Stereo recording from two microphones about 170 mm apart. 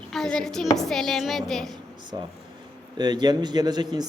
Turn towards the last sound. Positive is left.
turn(degrees=-25)  # may be behind; listen again after turning